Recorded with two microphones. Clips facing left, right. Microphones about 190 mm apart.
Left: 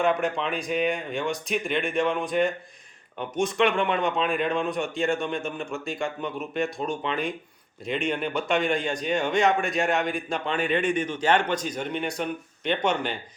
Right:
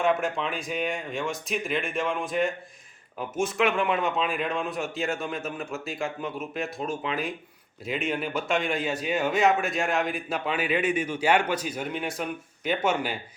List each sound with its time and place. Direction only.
0.0 s a man's voice: centre (ahead or behind)